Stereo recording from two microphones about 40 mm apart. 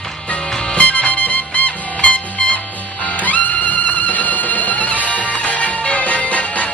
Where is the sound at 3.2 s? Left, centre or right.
Left.